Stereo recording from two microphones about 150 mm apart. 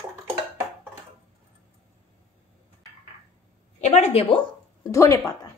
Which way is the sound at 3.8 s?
50° left (ahead or behind).